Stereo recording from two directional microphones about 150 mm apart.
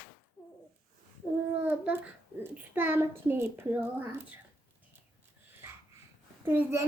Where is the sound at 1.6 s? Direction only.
10° right (ahead or behind).